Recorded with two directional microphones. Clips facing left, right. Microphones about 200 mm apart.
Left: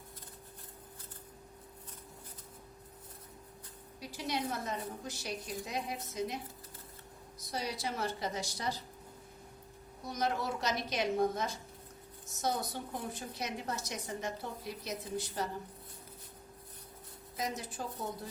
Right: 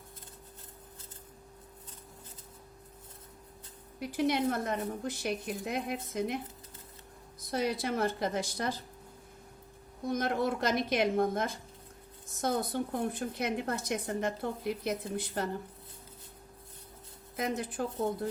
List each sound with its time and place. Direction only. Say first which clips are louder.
4.0 s a woman's voice: right 8 dB; 55° right (ahead or behind)
7.5 s a woman's voice: right 7 dB; 55° right (ahead or behind)
10.1 s a woman's voice: right 5 dB; 55° right (ahead or behind)
17.3 s a woman's voice: right 5 dB; 55° right (ahead or behind)